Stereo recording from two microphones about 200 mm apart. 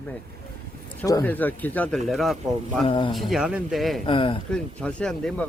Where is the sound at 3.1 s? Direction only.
Centre (ahead or behind).